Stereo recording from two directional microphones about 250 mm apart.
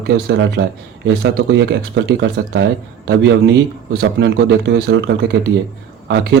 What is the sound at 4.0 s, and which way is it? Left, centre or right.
Speech, right.